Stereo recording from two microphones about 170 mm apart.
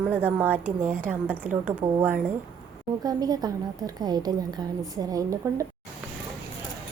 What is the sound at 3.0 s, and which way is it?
A woman's voice, 25° right (ahead or behind).